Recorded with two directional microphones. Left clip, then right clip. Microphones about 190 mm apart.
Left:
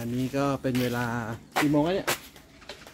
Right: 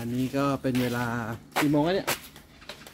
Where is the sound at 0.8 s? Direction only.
5° right (ahead or behind).